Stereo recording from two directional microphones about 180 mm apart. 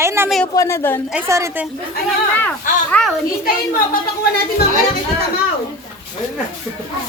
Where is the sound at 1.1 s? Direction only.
15° right (ahead or behind).